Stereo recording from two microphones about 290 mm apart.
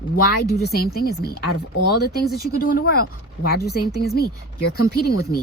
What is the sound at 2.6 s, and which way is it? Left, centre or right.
Speech, left.